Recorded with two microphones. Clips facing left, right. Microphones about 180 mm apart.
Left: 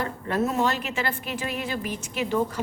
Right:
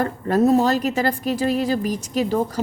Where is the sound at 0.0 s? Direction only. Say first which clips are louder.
Right 8 dB; 40° right (ahead or behind).